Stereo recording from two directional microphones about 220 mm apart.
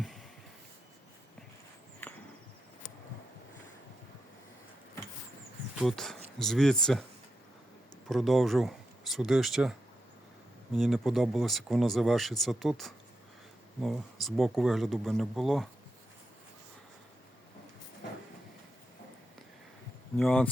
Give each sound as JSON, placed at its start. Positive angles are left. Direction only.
{"t": 5.8, "sound": "speech", "side_deg": 0}
{"t": 8.0, "sound": "speech", "side_deg": 0}
{"t": 10.8, "sound": "speech", "side_deg": 0}
{"t": 20.1, "sound": "speech", "side_deg": 5}